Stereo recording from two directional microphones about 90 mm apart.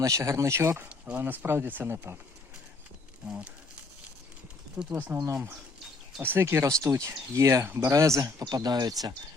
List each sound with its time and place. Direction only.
0.0 s speech: 35° right (ahead or behind)
1.2 s speech: 25° right (ahead or behind)
4.8 s speech: 20° right (ahead or behind); by 9.1 s 45° right (ahead or behind)